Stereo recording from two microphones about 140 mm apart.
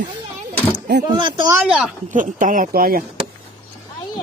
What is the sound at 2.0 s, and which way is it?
Speech, 65° right (ahead or behind).